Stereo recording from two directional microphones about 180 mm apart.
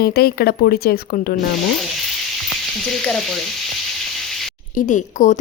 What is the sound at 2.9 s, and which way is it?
Speech, 5° left (ahead or behind).